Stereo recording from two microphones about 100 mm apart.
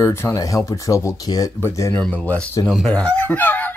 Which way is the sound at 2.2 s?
10° left (ahead or behind).